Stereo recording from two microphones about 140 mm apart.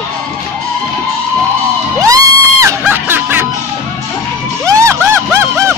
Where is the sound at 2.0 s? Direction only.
25° right (ahead or behind).